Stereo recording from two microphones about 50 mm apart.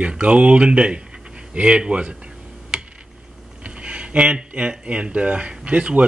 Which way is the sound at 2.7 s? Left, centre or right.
Centre.